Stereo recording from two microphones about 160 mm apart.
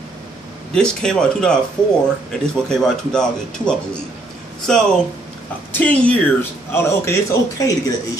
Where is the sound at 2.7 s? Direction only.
5° left (ahead or behind).